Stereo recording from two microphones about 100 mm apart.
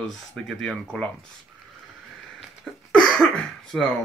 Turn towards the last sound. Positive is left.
turn(degrees=5)  # may be behind; listen again after turning